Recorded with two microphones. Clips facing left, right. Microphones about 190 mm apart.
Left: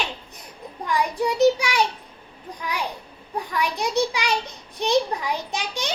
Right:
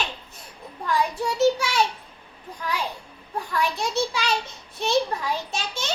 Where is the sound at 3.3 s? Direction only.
15° left (ahead or behind).